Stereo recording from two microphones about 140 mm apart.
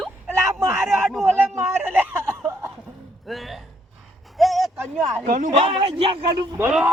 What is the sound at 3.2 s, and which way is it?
Speech, centre (ahead or behind).